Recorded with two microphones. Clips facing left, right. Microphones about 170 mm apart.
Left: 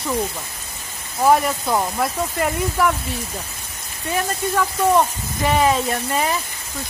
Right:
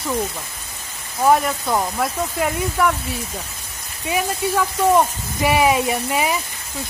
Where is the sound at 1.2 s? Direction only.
Centre (ahead or behind).